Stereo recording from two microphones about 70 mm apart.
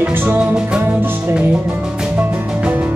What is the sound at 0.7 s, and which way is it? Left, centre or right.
Music, centre.